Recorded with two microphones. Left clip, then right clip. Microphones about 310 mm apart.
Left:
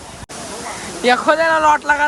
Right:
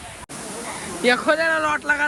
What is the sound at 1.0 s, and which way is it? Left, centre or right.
Speech, centre.